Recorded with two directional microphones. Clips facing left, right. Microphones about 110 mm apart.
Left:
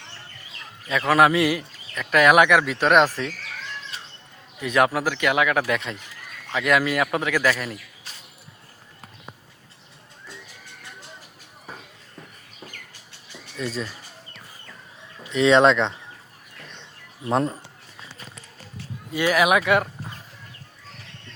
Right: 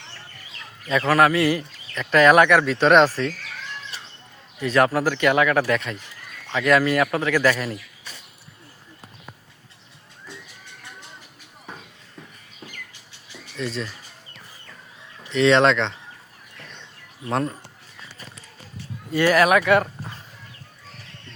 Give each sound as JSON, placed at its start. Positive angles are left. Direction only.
{"t": 1.0, "sound": "speech", "side_deg": 15}
{"t": 4.6, "sound": "a man's voice", "side_deg": 10}
{"t": 13.6, "sound": "speech", "side_deg": 5}
{"t": 15.2, "sound": "speech", "side_deg": 10}
{"t": 17.2, "sound": "speech", "side_deg": 20}
{"t": 19.1, "sound": "speech", "side_deg": 10}